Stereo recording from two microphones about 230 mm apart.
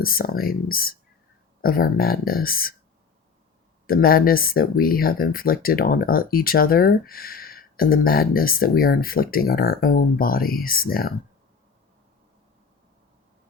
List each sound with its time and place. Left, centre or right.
0.0 s speech: left
3.8 s speech: left